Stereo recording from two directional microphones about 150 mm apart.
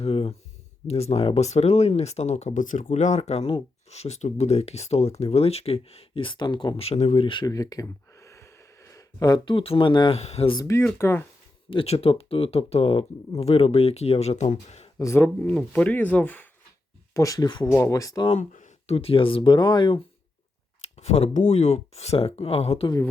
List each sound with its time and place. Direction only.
0.0 s a sound: 40° left (ahead or behind)
0.9 s speech: 45° left (ahead or behind)
10.2 s speech: 45° left (ahead or behind)
10.6 s speech: 20° left (ahead or behind)
11.7 s speech: 40° left (ahead or behind)
14.9 s speech: 20° left (ahead or behind)
17.2 s speech: 25° left (ahead or behind)
18.3 s speech: 55° left (ahead or behind); by 20.0 s 30° left (ahead or behind)
20.9 s speech: 45° left (ahead or behind)